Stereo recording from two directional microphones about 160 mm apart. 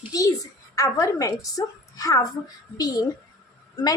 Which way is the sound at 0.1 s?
20° left (ahead or behind).